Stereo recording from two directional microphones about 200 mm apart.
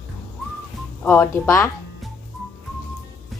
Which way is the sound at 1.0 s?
10° left (ahead or behind).